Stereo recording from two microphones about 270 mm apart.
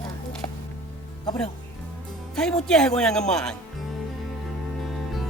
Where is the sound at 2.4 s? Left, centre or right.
Centre.